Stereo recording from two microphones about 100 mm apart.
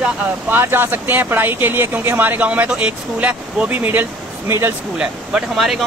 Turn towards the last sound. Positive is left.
turn(degrees=-5)  # may be behind; listen again after turning